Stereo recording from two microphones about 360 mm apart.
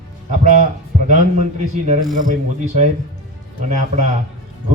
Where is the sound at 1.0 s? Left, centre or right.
Centre.